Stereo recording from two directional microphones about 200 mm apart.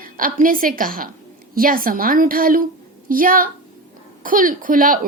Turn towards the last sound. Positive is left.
turn(degrees=-45)  # may be behind; listen again after turning